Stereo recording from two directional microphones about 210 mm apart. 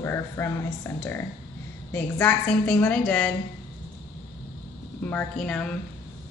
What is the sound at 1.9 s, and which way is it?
A woman's voice, 10° left (ahead or behind).